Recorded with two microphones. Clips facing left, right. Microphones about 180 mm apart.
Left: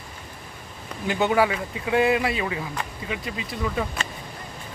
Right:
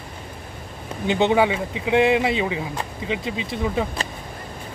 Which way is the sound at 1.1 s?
25° right (ahead or behind).